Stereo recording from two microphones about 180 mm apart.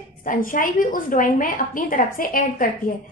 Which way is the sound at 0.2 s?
50° left (ahead or behind).